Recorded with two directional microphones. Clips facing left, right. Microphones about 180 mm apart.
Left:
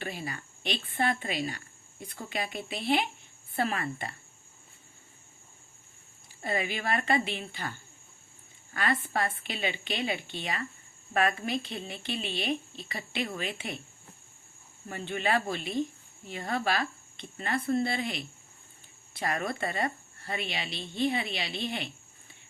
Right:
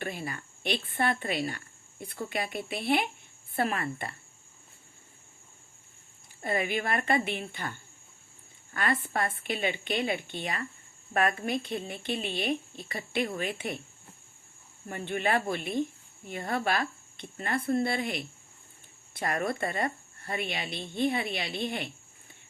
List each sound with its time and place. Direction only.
0.0 s a woman's voice: 50° right (ahead or behind)
6.4 s speech: 50° right (ahead or behind)
8.7 s speech: 50° right (ahead or behind)
14.8 s speech: 50° right (ahead or behind)